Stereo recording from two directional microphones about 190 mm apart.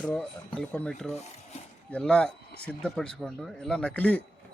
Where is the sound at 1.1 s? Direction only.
35° left (ahead or behind).